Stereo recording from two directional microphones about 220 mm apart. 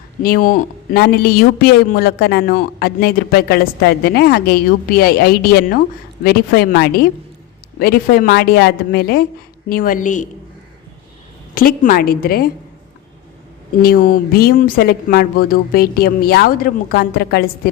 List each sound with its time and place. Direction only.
0.2 s a woman's voice: 40° left (ahead or behind)
11.5 s a woman's voice: 40° left (ahead or behind)
13.8 s a woman's voice: 40° left (ahead or behind)